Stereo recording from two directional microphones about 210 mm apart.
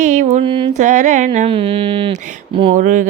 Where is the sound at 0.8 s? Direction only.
35° right (ahead or behind).